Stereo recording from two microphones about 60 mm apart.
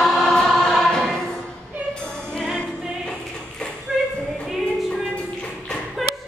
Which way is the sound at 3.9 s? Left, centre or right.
Centre.